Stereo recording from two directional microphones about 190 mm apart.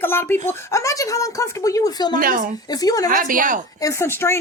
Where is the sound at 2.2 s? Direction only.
50° right (ahead or behind).